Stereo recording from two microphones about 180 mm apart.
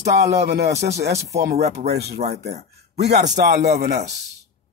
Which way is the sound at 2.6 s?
65° right (ahead or behind).